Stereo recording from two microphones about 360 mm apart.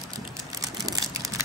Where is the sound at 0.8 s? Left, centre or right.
Centre.